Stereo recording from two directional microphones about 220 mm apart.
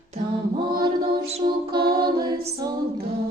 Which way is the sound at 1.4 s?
35° right (ahead or behind).